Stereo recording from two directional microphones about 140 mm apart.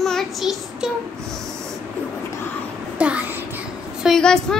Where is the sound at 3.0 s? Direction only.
10° right (ahead or behind).